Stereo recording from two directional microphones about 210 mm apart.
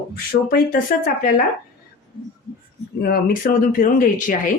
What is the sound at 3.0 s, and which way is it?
Speech, 45° left (ahead or behind).